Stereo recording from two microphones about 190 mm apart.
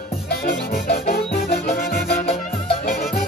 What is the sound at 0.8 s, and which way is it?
Music, 55° left (ahead or behind).